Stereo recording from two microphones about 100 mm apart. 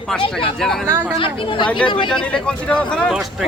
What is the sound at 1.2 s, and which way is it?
Speech, 55° left (ahead or behind).